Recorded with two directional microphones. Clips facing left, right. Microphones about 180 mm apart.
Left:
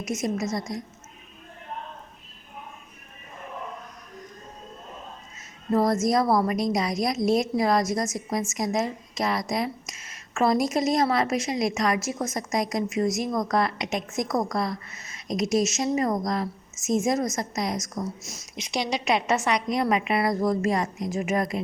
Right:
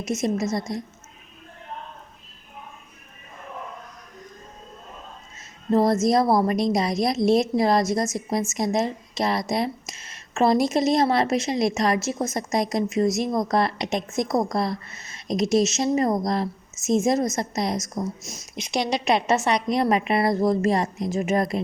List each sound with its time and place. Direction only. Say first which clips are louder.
0.0 s a woman's voice: right 3 dB; 25° right (ahead or behind)
5.7 s a woman's voice: right 3 dB; 25° right (ahead or behind)
18.5 s a woman's voice: right 3 dB; 55° right (ahead or behind)
19.0 s a woman's voice: right 2 dB; 30° right (ahead or behind)